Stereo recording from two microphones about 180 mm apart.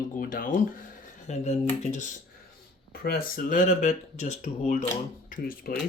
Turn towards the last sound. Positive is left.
turn(degrees=55)  # may be behind; listen again after turning